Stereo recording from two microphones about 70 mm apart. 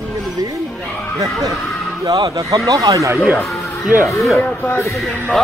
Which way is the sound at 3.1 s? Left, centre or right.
Centre.